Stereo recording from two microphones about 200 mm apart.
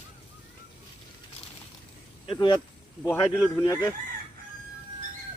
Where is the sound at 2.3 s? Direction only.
20° left (ahead or behind).